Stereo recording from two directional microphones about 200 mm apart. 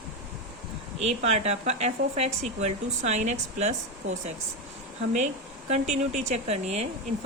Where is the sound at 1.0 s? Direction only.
35° right (ahead or behind).